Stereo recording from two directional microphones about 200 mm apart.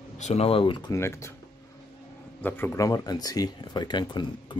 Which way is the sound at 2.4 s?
10° left (ahead or behind).